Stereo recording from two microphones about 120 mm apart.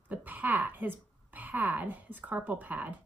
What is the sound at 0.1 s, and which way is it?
A woman's voice, 15° right (ahead or behind).